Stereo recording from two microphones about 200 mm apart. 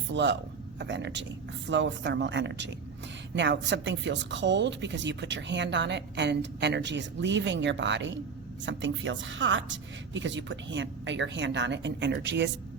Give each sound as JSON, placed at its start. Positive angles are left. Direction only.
{"t": 0.1, "sound": "a woman's voice", "side_deg": -60}